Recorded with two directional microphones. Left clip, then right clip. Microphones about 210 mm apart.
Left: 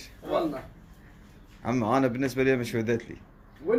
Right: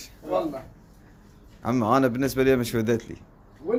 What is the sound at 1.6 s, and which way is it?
A man's voice, 20° right (ahead or behind).